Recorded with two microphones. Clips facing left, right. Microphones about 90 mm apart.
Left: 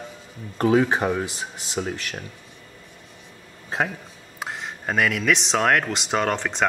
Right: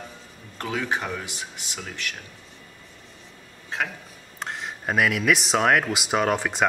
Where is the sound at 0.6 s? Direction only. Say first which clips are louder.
Left 9 dB; 30° left (ahead or behind).